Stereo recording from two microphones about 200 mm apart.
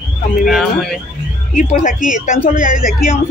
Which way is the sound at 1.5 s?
40° left (ahead or behind).